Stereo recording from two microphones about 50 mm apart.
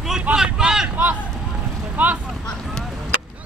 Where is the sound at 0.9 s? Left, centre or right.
Right.